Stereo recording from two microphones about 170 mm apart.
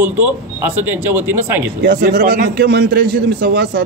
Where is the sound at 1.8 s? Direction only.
65° right (ahead or behind).